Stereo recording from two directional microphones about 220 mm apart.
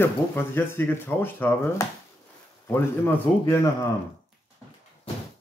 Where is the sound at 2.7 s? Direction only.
10° left (ahead or behind).